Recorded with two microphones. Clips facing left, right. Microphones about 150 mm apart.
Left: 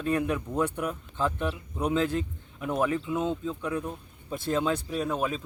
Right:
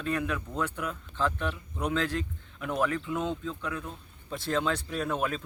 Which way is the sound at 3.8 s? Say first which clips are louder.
Left 5 dB; 15° left (ahead or behind).